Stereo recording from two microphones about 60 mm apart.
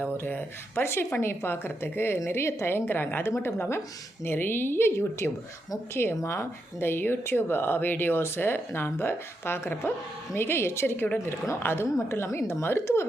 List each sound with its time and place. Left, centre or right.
0.0 s speech: left
0.8 s a woman's voice: left
10.9 s speech: left
11.3 s a woman's voice: left